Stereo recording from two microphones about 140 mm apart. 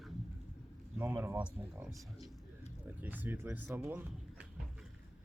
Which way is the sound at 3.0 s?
10° right (ahead or behind).